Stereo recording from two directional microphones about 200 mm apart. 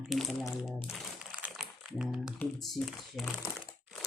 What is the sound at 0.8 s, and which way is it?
Crumpling, 5° right (ahead or behind).